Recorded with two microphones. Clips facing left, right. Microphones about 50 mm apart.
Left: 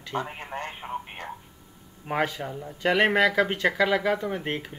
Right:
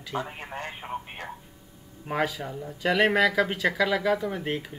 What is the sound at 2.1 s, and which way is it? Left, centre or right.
Speech, centre.